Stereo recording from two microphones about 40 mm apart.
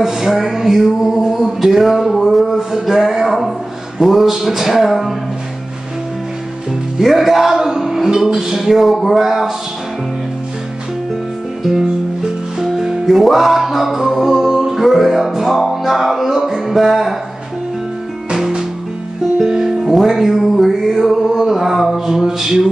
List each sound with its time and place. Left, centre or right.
0.0 s a sound: centre
4.0 s speech: centre
7.0 s music: centre
8.5 s speech: centre
11.6 s music: centre
19.3 s music: centre
21.1 s male singing: centre